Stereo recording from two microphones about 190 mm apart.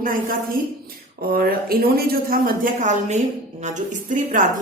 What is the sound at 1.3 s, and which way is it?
A woman's voice, 50° right (ahead or behind).